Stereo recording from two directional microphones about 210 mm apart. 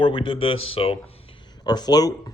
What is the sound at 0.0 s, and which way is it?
Speech, 25° left (ahead or behind).